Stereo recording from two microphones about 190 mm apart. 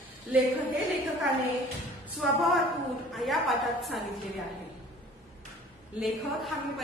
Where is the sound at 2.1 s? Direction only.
Centre (ahead or behind).